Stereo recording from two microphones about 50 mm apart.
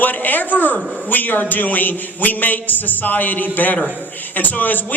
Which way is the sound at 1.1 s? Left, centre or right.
Left.